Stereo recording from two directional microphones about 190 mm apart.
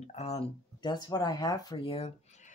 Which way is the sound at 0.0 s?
35° left (ahead or behind).